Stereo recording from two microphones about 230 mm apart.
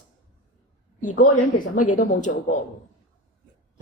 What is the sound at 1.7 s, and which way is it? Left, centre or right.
Speech, left.